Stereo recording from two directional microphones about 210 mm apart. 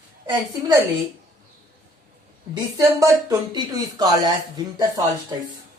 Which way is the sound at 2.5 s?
15° right (ahead or behind).